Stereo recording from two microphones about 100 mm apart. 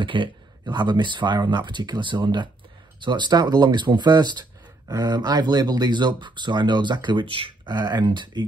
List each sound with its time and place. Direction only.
0.0 s speech: 55° right (ahead or behind)